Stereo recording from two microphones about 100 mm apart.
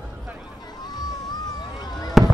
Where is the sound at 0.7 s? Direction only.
40° left (ahead or behind).